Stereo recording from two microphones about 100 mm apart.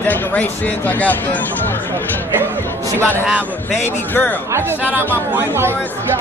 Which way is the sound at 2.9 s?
20° left (ahead or behind).